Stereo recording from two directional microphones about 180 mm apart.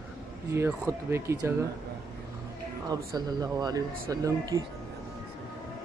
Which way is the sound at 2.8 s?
20° right (ahead or behind).